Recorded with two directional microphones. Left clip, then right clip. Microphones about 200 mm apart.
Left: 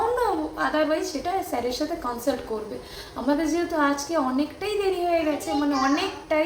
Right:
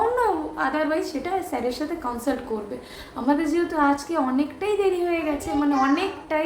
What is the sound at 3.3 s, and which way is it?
A woman's voice, 5° right (ahead or behind).